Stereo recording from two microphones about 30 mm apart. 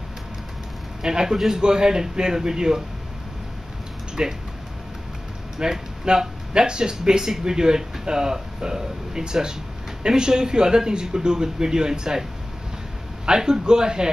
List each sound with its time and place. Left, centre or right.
1.0 s a man's voice: right
4.1 s a sound: right
5.6 s a man's voice: right
13.4 s a man's voice: right